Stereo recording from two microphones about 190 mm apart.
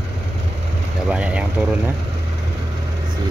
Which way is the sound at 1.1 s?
5° right (ahead or behind).